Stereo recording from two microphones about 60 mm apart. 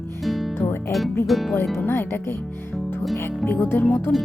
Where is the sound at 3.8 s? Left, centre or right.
Left.